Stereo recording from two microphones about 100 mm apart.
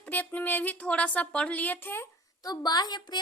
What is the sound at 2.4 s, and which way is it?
Speech, 40° left (ahead or behind).